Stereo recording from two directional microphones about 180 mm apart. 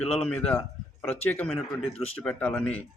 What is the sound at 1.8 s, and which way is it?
Speech, 35° left (ahead or behind).